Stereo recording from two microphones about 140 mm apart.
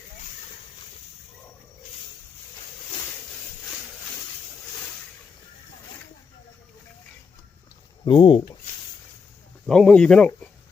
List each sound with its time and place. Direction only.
8.0 s speech: 40° left (ahead or behind)
9.6 s speech: 5° left (ahead or behind)